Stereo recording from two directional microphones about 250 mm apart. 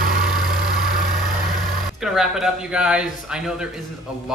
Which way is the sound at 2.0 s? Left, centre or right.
Centre.